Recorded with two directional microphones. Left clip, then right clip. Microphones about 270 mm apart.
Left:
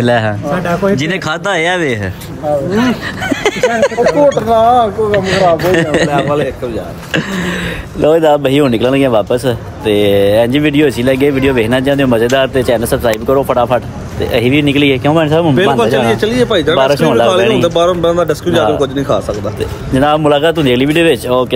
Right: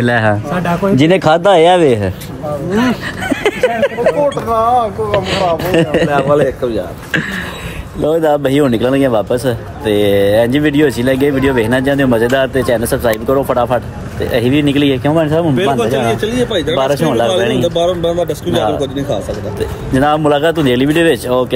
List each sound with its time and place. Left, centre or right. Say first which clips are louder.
0.0 s a man's voice: left 1 dB; centre
0.9 s a man's voice: right 6 dB; centre
8.0 s a man's voice: left 3 dB; centre
16.4 s speech: left 4 dB; left
16.7 s a man's voice: left 2 dB; centre
18.0 s speech: left 3 dB; left
18.5 s a man's voice: left 3 dB; centre
19.9 s a man's voice: left 2 dB; centre